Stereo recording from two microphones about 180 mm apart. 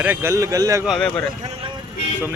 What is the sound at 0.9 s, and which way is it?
Speech, 5° left (ahead or behind).